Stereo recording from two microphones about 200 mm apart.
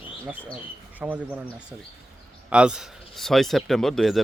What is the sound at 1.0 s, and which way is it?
Speech, 10° right (ahead or behind).